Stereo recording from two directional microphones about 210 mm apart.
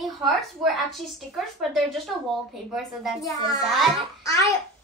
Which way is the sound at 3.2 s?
15° left (ahead or behind).